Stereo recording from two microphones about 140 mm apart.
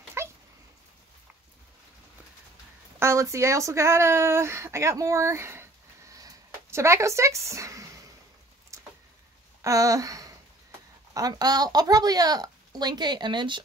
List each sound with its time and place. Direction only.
0.2 s dog: 20° right (ahead or behind)
3.0 s speech: 20° right (ahead or behind)
6.1 s a sound: 20° right (ahead or behind)
9.6 s speech: 25° right (ahead or behind)